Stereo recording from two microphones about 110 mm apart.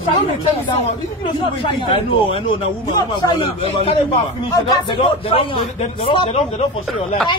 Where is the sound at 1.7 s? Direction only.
50° left (ahead or behind).